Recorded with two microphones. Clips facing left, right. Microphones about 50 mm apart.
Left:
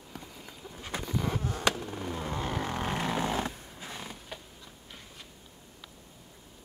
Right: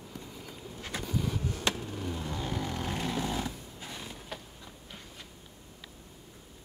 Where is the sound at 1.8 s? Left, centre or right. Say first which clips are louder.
Left 1 dB; left.